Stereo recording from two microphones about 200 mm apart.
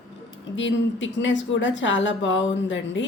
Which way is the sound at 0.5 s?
65° left (ahead or behind).